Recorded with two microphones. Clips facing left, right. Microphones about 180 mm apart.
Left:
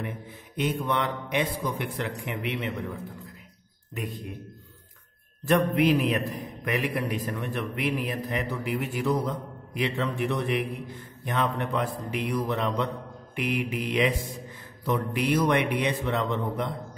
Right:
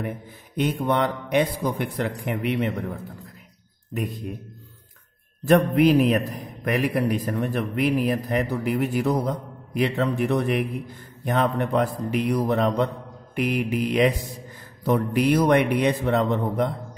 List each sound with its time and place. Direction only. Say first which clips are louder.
0.6 s a man's voice: right 5 dB; 40° right (ahead or behind)
5.5 s a man's voice: right 5 dB; 40° right (ahead or behind)